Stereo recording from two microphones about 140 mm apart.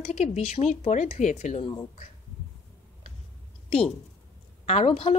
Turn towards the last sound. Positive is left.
turn(degrees=40)  # may be behind; listen again after turning